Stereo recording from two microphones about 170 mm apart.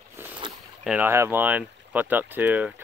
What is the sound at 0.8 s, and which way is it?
Speech, 10° right (ahead or behind).